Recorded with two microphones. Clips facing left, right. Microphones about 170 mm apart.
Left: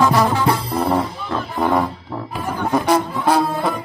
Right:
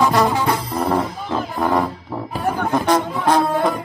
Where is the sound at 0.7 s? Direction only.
10° left (ahead or behind).